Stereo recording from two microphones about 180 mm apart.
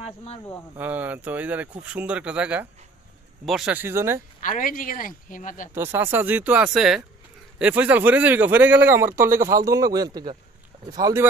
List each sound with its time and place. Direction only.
0.0 s speech: 35° left (ahead or behind)
0.7 s speech: 10° right (ahead or behind)
4.4 s speech: 45° left (ahead or behind)
5.8 s speech: 10° right (ahead or behind)